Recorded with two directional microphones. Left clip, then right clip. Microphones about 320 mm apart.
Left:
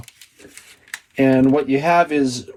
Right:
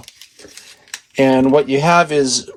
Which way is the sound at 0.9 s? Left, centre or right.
Right.